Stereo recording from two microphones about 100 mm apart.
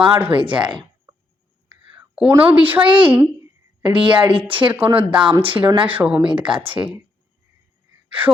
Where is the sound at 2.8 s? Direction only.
55° right (ahead or behind).